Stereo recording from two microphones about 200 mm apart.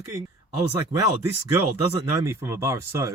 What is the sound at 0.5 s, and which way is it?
Speech, 15° right (ahead or behind).